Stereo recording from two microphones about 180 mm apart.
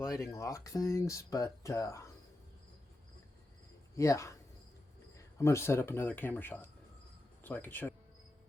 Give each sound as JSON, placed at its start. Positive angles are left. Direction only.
{"t": 0.0, "sound": "speech", "side_deg": 15}
{"t": 3.9, "sound": "speech", "side_deg": 15}